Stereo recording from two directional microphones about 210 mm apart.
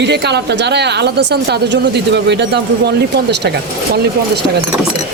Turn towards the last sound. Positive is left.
turn(degrees=-55)  # may be behind; listen again after turning